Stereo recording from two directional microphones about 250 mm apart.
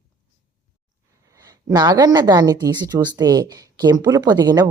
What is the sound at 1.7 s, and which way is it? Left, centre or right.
Speech, centre.